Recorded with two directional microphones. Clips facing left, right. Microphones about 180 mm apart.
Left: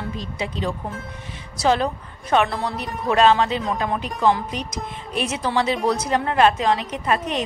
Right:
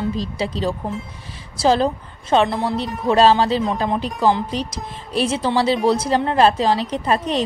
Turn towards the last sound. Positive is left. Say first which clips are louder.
# right 3 dB
turn(degrees=-30)  # may be behind; listen again after turning